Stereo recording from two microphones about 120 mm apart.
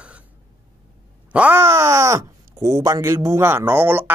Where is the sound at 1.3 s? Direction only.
15° right (ahead or behind).